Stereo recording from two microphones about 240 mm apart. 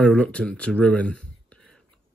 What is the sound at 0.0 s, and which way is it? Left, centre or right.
Speech, centre.